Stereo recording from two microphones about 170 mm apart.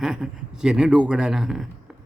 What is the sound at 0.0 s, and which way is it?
Speech, 5° right (ahead or behind).